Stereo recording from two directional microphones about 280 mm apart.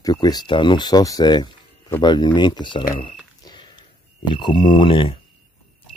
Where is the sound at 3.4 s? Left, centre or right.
Centre.